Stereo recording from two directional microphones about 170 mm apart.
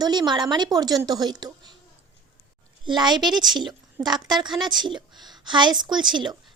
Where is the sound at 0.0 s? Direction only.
25° right (ahead or behind).